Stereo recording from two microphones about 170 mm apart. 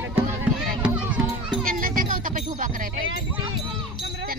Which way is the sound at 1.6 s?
55° right (ahead or behind).